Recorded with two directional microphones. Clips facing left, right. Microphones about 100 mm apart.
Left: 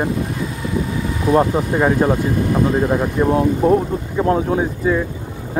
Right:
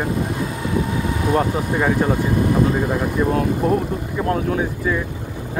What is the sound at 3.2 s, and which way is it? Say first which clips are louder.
Speech: left 4 dB; 20° left (ahead or behind).